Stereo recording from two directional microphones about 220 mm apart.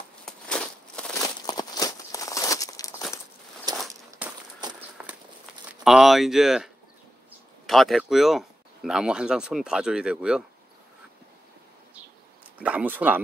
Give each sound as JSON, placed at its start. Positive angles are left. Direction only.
{"t": 0.2, "sound": "a sound", "side_deg": 5}
{"t": 1.4, "sound": "crumpling", "side_deg": 15}
{"t": 3.7, "sound": "walk", "side_deg": 0}
{"t": 4.6, "sound": "walk", "side_deg": -20}
{"t": 5.0, "sound": "a sound", "side_deg": -5}
{"t": 5.7, "sound": "speech", "side_deg": 0}
{"t": 12.5, "sound": "speech", "side_deg": -5}